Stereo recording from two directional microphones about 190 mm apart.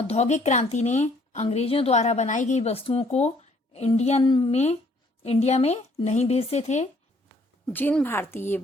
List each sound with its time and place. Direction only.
0.1 s speech: 35° left (ahead or behind)
4.2 s speech: 25° left (ahead or behind)
7.7 s a woman's voice: 10° left (ahead or behind)